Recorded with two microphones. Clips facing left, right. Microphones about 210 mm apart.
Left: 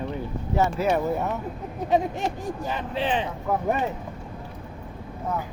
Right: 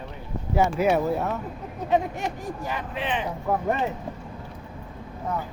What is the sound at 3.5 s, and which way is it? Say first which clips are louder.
Speech: right 1 dB; centre (ahead or behind).